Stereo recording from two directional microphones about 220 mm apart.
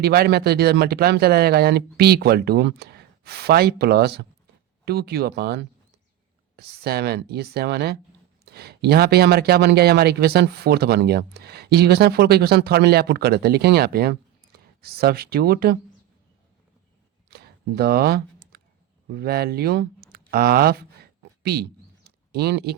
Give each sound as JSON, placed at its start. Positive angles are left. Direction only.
{"t": 0.0, "sound": "speech", "side_deg": -45}
{"t": 17.3, "sound": "a sound", "side_deg": -45}
{"t": 19.1, "sound": "speech", "side_deg": -45}